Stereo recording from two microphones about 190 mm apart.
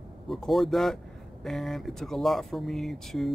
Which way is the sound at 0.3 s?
Centre (ahead or behind).